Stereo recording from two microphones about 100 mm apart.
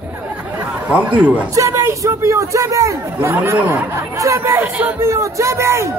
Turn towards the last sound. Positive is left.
turn(degrees=-25)  # may be behind; listen again after turning